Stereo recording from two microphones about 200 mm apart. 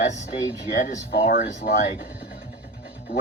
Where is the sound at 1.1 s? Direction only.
50° left (ahead or behind).